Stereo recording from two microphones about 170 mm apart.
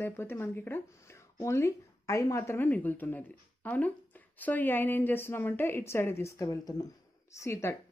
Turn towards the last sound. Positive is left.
turn(degrees=15)  # may be behind; listen again after turning